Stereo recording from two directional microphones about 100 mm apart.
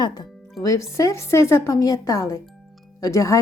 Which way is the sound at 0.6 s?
30° left (ahead or behind).